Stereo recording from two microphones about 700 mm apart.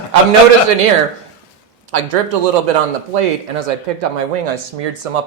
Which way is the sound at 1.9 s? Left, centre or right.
Right.